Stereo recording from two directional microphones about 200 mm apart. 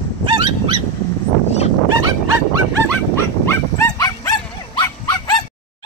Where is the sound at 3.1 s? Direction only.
15° left (ahead or behind).